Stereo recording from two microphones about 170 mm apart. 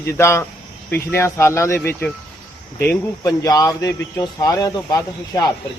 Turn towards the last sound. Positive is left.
turn(degrees=20)  # may be behind; listen again after turning